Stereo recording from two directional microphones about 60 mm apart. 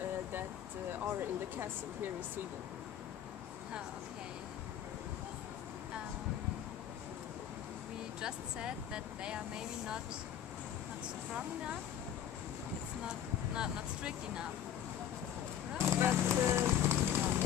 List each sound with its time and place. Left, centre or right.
0.9 s speech: right
8.2 s speech: centre
13.1 s speech: centre
15.8 s horse: right